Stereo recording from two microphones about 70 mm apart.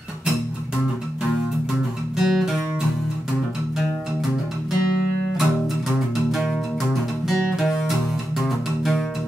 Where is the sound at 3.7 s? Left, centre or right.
Centre.